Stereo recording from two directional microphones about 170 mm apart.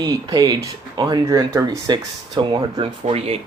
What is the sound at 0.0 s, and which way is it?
Speech, 25° right (ahead or behind).